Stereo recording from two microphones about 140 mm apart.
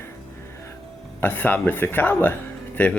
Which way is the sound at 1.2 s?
15° left (ahead or behind).